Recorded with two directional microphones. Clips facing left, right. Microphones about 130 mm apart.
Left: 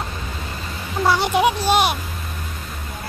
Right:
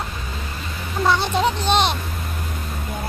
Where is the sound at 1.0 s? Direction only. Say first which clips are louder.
Left 2 dB; 10° left (ahead or behind).